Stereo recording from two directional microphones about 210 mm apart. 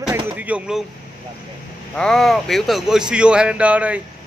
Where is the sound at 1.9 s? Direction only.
5° left (ahead or behind).